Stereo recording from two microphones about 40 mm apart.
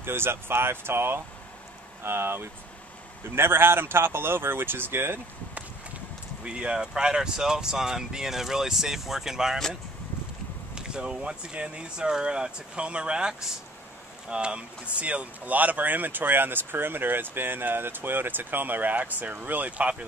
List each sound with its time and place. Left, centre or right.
0.0 s speech: right
6.4 s speech: right
10.7 s speech: right